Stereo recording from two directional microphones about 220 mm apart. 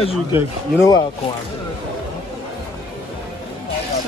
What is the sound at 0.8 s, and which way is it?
Speech, 15° left (ahead or behind).